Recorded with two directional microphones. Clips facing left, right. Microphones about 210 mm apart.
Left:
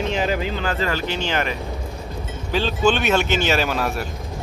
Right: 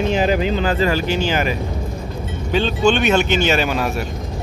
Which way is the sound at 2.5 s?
Centre (ahead or behind).